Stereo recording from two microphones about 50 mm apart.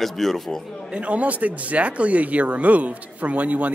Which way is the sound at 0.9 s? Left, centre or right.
Right.